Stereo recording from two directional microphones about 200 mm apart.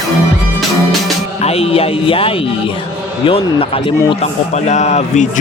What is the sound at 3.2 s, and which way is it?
A man's voice, 25° left (ahead or behind).